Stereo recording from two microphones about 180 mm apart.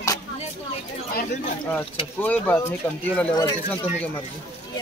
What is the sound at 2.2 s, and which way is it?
Speech, 10° left (ahead or behind).